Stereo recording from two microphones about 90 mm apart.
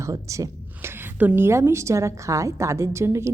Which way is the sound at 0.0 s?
35° right (ahead or behind).